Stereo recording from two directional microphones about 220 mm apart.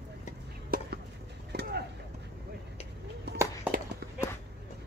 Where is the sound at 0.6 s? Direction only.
40° right (ahead or behind).